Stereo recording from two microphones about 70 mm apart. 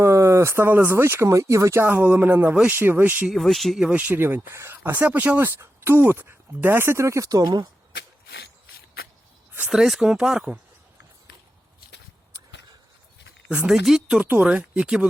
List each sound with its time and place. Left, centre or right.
0.0 s speech: right
1.8 s speech: right
3.2 s speech: centre
3.8 s speech: centre
4.2 s speech: right
5.5 s speech: right
9.6 s speech: centre
13.7 s speech: centre
14.2 s speech: centre